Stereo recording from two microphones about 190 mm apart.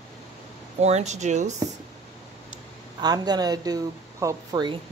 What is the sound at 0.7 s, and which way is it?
Speech, 35° right (ahead or behind).